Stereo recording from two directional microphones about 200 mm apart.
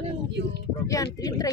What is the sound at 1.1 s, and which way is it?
Speech, 20° left (ahead or behind).